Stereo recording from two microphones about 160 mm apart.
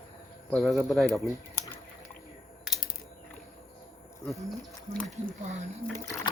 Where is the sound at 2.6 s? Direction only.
5° right (ahead or behind).